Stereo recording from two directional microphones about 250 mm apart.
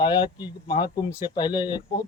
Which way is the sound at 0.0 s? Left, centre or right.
Centre.